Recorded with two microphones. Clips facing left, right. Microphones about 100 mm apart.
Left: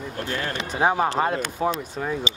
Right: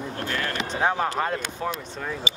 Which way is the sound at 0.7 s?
15° left (ahead or behind).